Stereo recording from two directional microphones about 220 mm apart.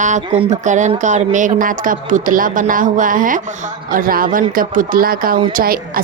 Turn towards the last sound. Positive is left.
turn(degrees=-40)  # may be behind; listen again after turning